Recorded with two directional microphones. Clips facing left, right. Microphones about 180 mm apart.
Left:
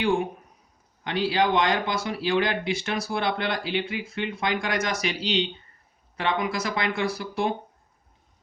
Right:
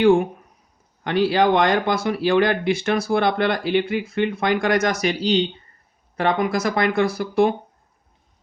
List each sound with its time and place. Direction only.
1.0 s speech: 55° right (ahead or behind)